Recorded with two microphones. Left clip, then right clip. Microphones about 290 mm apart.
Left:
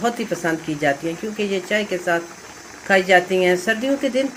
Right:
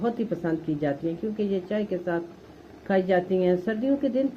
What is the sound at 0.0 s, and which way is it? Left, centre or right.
Speech, centre.